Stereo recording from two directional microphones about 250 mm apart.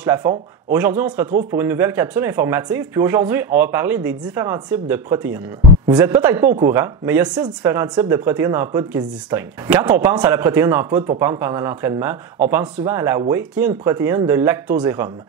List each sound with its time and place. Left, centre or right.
0.0 s speech: centre